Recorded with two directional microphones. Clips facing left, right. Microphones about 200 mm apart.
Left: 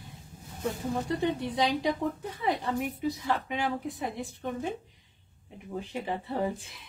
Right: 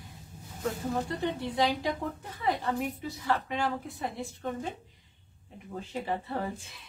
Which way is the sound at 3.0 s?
15° left (ahead or behind).